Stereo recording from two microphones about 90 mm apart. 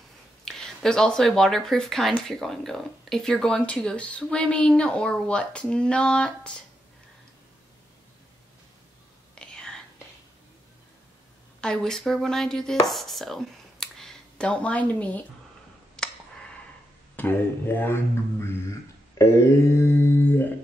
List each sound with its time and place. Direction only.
0.5 s speech: 5° left (ahead or behind)
9.3 s whispering: 10° left (ahead or behind)
11.6 s speech: 5° left (ahead or behind)
16.0 s clicking: 10° left (ahead or behind)
17.1 s mantra: 20° left (ahead or behind)
19.1 s mantra: 30° left (ahead or behind)